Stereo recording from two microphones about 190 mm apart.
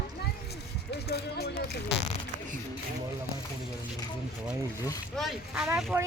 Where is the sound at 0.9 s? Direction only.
60° left (ahead or behind).